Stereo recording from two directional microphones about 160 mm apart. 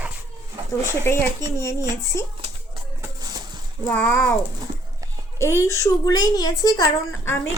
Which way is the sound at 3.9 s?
10° left (ahead or behind).